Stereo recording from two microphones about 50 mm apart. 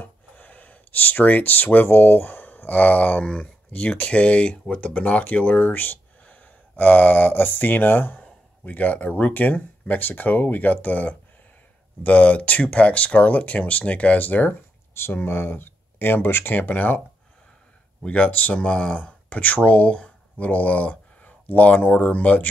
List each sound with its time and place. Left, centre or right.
0.0 s gasp: left
3.3 s speech: left
15.0 s speech: left
18.0 s speech: left